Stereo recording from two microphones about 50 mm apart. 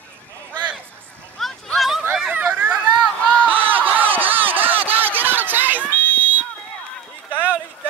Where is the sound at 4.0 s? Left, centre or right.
Right.